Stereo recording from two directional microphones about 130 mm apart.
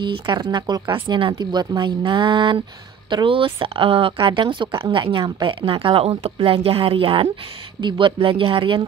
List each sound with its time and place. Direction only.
0.0 s speech: 40° right (ahead or behind)